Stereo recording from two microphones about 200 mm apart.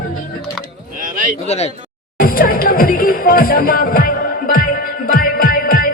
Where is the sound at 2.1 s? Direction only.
45° left (ahead or behind).